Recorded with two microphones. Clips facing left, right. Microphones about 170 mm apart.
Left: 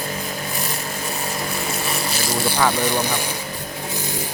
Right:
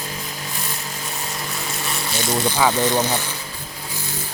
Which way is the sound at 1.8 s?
5° left (ahead or behind).